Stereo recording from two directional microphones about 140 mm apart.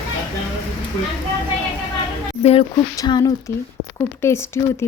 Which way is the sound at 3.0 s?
30° left (ahead or behind).